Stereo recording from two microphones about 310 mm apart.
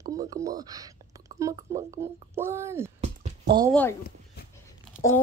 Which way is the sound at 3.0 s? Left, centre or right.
Right.